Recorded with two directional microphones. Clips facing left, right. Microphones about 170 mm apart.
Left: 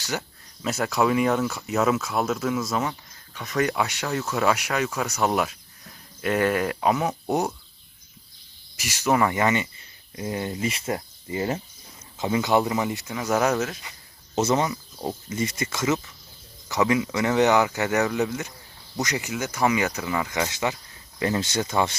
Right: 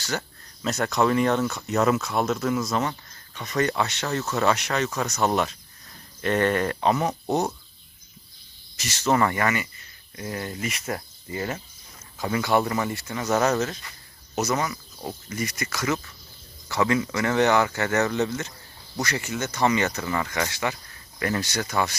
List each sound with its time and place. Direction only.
0.0 s speech: 10° left (ahead or behind)
8.7 s speech: 10° left (ahead or behind)
13.1 s speech: 5° left (ahead or behind)
14.3 s speech: 25° left (ahead or behind)